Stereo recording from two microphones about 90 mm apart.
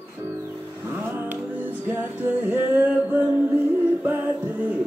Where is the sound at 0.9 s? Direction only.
20° right (ahead or behind).